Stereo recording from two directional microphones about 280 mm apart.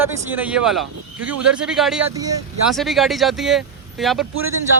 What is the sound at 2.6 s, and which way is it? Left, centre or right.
Speech, centre.